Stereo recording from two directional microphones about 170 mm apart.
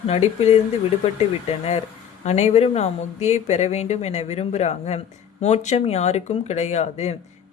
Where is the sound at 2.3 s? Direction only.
40° left (ahead or behind).